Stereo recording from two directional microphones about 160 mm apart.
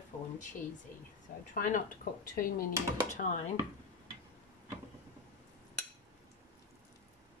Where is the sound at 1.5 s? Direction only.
55° left (ahead or behind).